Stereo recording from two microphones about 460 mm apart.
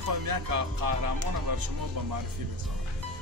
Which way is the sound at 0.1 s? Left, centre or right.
Right.